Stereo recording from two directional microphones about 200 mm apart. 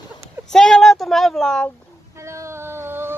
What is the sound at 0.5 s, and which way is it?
Speech, 5° left (ahead or behind).